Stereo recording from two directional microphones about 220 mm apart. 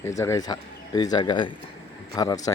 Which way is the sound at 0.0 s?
15° left (ahead or behind).